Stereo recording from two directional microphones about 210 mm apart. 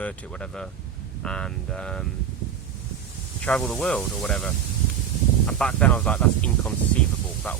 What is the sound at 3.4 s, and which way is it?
Speech, 5° left (ahead or behind).